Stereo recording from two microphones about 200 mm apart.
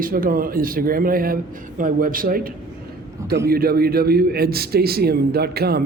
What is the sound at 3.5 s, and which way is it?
A man's voice, 50° right (ahead or behind).